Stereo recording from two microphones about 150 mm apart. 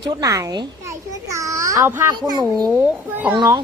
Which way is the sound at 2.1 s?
25° right (ahead or behind).